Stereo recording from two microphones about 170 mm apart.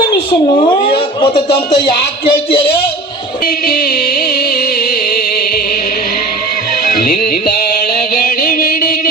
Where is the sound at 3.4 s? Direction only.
60° left (ahead or behind).